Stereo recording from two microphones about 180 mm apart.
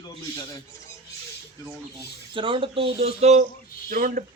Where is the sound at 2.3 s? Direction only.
30° right (ahead or behind).